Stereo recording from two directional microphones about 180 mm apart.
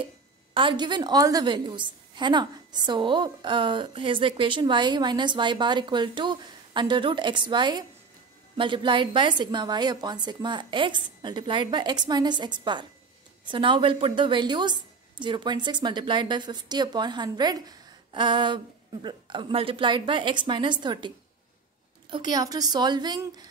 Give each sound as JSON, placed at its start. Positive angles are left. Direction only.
{"t": 0.6, "sound": "a woman's voice", "side_deg": -25}
{"t": 22.1, "sound": "a woman's voice", "side_deg": -25}